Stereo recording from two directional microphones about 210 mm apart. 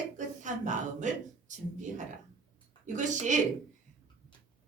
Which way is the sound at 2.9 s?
35° right (ahead or behind).